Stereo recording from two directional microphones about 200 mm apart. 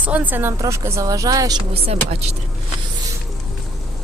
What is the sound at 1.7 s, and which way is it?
Speech, 30° right (ahead or behind).